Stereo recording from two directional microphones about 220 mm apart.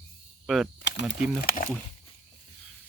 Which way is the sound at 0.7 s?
50° left (ahead or behind).